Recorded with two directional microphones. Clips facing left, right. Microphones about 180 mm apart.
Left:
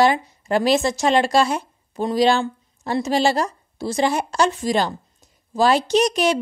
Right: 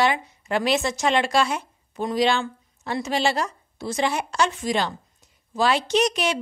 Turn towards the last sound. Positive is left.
turn(degrees=40)  # may be behind; listen again after turning